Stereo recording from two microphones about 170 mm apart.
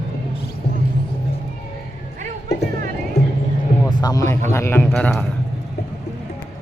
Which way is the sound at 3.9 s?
25° left (ahead or behind).